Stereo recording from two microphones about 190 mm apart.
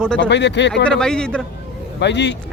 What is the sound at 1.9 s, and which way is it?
Speech, 65° left (ahead or behind).